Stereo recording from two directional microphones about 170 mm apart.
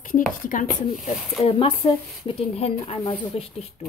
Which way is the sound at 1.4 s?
35° left (ahead or behind).